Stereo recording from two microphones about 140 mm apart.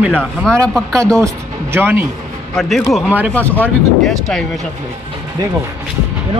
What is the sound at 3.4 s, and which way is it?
Speech, 10° left (ahead or behind).